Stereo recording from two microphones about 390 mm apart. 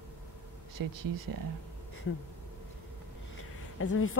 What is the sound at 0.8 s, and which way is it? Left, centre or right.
Speech, right.